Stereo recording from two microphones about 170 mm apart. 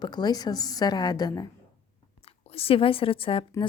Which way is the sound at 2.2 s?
35° left (ahead or behind).